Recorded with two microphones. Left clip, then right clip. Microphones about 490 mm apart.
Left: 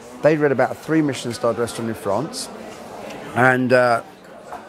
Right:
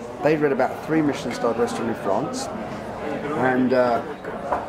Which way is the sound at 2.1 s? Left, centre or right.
Left.